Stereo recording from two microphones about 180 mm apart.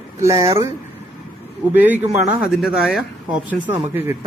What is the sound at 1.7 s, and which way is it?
Speech, 10° right (ahead or behind).